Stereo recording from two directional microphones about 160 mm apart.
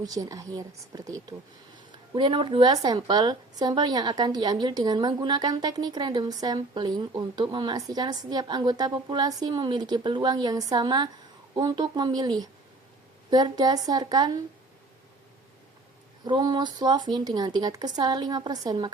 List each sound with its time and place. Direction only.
0.0 s a woman's voice: 20° right (ahead or behind)
16.2 s a woman's voice: 25° right (ahead or behind)